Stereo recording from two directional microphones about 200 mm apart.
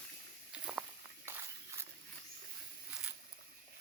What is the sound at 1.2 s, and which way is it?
Walk, 10° right (ahead or behind).